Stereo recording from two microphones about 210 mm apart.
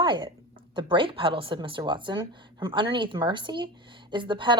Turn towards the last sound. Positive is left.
turn(degrees=-20)  # may be behind; listen again after turning